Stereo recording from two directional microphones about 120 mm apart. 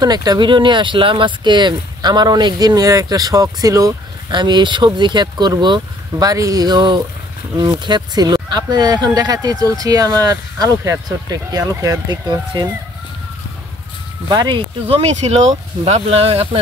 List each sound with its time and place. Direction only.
0.0 s speech: 35° right (ahead or behind)
4.3 s speech: 40° right (ahead or behind)
14.3 s speech: 35° right (ahead or behind)
14.9 s speech: 65° right (ahead or behind)
15.8 s speech: 55° right (ahead or behind)